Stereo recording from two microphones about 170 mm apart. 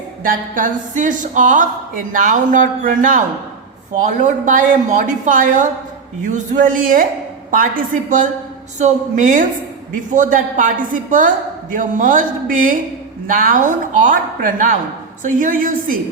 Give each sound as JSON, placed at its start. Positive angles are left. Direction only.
{"t": 0.3, "sound": "a woman's voice", "side_deg": -50}
{"t": 8.8, "sound": "a woman's voice", "side_deg": -50}